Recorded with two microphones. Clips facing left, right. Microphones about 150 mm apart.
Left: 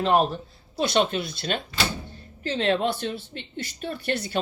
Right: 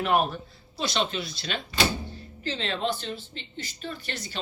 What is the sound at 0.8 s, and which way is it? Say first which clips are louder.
Speech: left 6 dB; 50° left (ahead or behind).